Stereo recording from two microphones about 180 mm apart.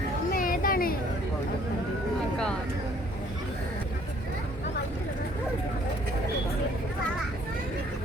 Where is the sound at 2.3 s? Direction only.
5° left (ahead or behind).